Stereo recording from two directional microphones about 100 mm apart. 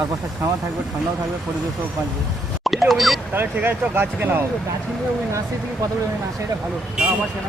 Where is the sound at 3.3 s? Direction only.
20° right (ahead or behind).